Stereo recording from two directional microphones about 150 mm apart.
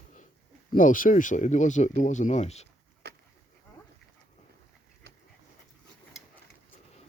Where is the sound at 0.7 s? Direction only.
65° left (ahead or behind).